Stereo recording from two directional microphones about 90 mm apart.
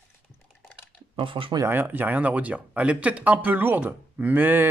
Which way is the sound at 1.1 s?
75° right (ahead or behind).